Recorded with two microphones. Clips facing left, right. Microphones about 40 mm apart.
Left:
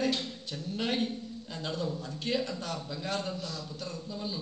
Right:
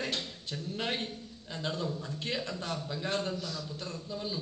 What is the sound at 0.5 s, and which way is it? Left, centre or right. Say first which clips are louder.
A man's voice: left 2 dB; centre.